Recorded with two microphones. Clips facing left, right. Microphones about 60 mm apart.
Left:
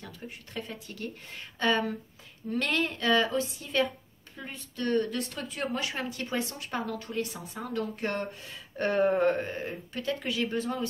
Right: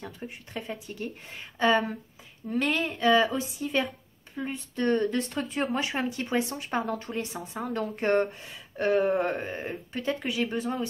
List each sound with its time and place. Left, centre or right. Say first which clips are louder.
0.0 s speech: right 4 dB; centre
4.4 s speech: right 6 dB; right
8.5 s a sound: right 2 dB; centre
9.6 s speech: right 1 dB; right